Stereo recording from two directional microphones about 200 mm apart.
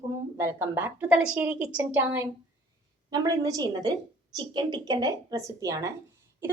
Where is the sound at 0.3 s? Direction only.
15° right (ahead or behind).